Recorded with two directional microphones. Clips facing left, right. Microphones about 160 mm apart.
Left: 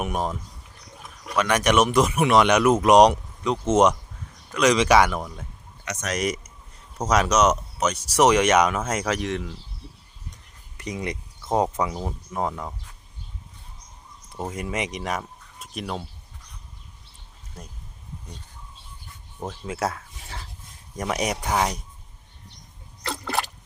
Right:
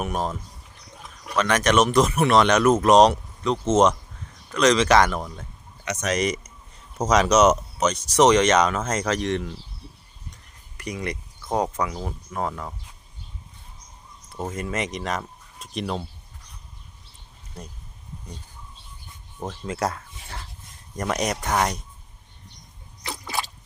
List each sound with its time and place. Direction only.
0.0 s speech: 15° left (ahead or behind)
1.4 s speech: 10° left (ahead or behind)
10.8 s speech: 20° left (ahead or behind)
14.3 s speech: 15° left (ahead or behind)
19.4 s speech: 5° left (ahead or behind)
23.0 s a sound: 65° left (ahead or behind)